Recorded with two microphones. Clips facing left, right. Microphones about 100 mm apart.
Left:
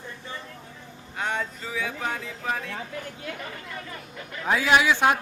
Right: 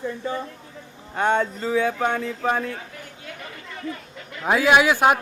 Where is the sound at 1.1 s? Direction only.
55° right (ahead or behind).